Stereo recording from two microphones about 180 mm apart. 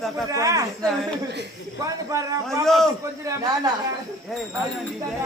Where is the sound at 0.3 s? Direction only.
20° right (ahead or behind).